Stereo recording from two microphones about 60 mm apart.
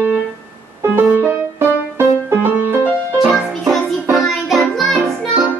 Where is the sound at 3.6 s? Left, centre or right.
Centre.